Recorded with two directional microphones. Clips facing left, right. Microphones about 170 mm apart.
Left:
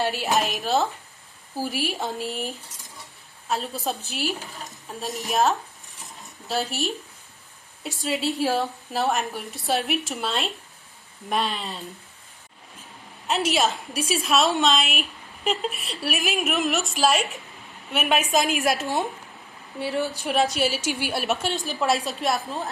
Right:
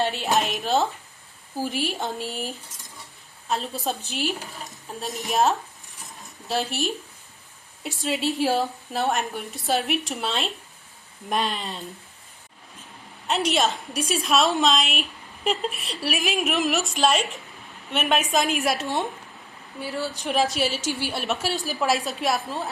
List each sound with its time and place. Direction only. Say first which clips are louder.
0.0 s a sound: even; centre (ahead or behind)
1.6 s a woman's voice: even; centre (ahead or behind)
13.2 s a woman's voice: even; centre (ahead or behind)
19.8 s speech: left 3 dB; 20° left (ahead or behind)
20.2 s a woman's voice: right 1 dB; centre (ahead or behind)
20.8 s a woman's voice: left 1 dB; 15° left (ahead or behind)
21.2 s a woman's voice: left 1 dB; centre (ahead or behind)